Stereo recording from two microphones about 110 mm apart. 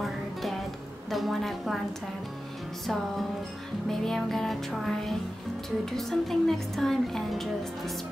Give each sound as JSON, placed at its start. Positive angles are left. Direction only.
{"t": 0.0, "sound": "music", "side_deg": 0}
{"t": 1.1, "sound": "speech", "side_deg": 0}
{"t": 3.9, "sound": "speech", "side_deg": 0}